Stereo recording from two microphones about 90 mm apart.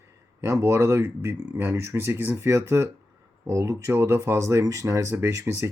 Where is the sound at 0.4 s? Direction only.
35° right (ahead or behind).